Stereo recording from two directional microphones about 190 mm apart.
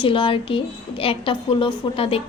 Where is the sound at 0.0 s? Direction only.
25° left (ahead or behind).